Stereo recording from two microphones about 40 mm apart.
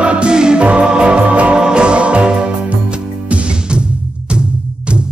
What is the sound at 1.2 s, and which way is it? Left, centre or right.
Music, right.